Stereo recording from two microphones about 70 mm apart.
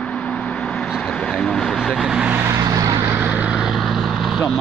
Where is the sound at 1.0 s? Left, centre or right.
Centre.